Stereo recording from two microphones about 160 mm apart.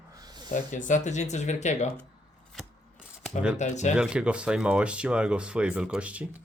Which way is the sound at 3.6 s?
50° left (ahead or behind).